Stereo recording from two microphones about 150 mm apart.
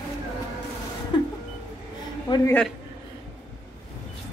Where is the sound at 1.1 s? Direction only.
30° left (ahead or behind).